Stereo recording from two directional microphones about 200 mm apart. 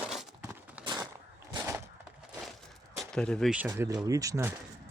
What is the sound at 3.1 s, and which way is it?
Speech, 5° left (ahead or behind).